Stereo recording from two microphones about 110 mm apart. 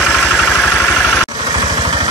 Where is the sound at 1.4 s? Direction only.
40° right (ahead or behind).